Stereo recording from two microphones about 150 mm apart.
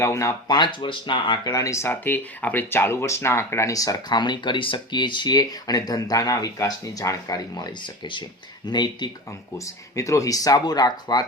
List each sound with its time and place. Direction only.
0.0 s speech: 20° left (ahead or behind)